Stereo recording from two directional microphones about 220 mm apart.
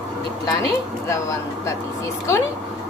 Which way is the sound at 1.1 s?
15° left (ahead or behind).